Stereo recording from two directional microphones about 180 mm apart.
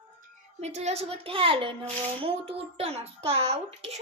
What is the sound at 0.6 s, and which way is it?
A child's voice, 40° right (ahead or behind).